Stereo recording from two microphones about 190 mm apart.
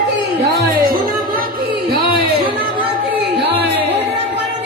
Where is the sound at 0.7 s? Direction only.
55° right (ahead or behind).